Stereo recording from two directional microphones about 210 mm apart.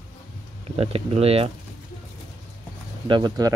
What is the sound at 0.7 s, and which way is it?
Speech, 30° right (ahead or behind).